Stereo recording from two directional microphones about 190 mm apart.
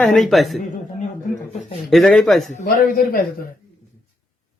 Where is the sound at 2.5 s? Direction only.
45° left (ahead or behind).